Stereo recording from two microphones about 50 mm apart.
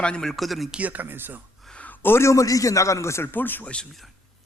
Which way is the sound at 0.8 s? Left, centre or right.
Right.